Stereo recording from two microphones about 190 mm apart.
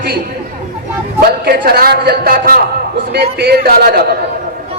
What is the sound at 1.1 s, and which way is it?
A man's voice, 55° right (ahead or behind).